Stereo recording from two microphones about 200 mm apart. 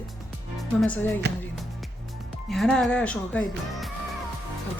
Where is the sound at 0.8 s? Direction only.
10° left (ahead or behind).